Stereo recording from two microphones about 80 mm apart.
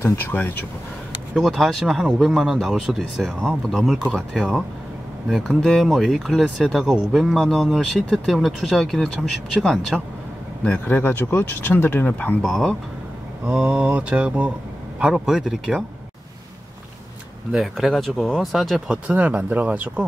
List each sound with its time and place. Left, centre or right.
0.0 s speech: left
1.3 s speech: centre
12.4 s speech: centre
13.5 s speech: centre
17.5 s speech: centre
18.9 s speech: centre